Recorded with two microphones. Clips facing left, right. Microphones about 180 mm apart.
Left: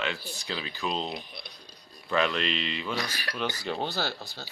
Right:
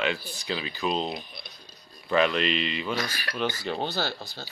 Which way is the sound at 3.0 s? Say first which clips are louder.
Right 2 dB; 20° left (ahead or behind).